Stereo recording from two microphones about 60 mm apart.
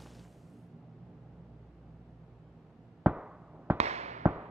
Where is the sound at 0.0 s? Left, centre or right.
Centre.